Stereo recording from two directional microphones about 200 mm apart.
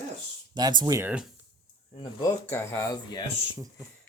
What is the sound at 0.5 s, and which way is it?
Speech, 20° right (ahead or behind).